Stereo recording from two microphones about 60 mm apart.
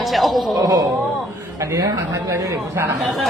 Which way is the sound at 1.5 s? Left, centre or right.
Right.